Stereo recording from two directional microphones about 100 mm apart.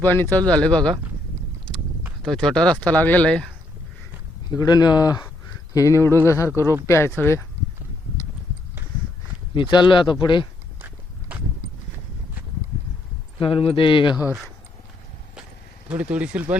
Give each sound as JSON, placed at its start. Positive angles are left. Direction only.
{"t": 0.0, "sound": "speech", "side_deg": 20}
{"t": 2.2, "sound": "speech", "side_deg": 5}
{"t": 4.5, "sound": "speech", "side_deg": 40}
{"t": 9.6, "sound": "speech", "side_deg": 50}
{"t": 10.8, "sound": "walk", "side_deg": -20}
{"t": 13.4, "sound": "speech", "side_deg": 70}
{"t": 15.9, "sound": "speech", "side_deg": -10}